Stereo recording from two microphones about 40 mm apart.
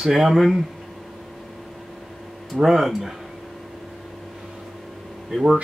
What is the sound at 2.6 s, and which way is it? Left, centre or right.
Speech, centre.